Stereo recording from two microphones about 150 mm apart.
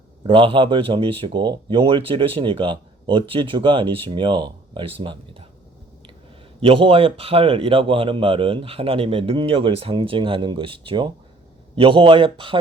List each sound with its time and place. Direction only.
0.3 s speech: 35° right (ahead or behind)
6.6 s speech: 35° right (ahead or behind)